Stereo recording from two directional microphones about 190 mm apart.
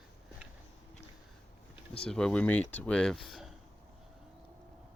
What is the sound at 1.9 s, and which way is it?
Speech, 5° left (ahead or behind).